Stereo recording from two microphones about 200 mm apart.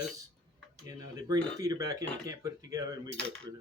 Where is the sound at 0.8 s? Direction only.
15° right (ahead or behind).